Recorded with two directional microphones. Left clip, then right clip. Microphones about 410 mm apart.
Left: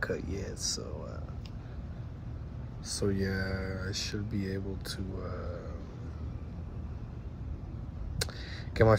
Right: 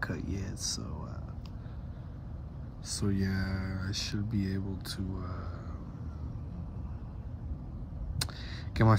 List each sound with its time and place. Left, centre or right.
0.0 s speech: centre
2.9 s speech: centre
8.2 s a sound: centre
8.8 s speech: centre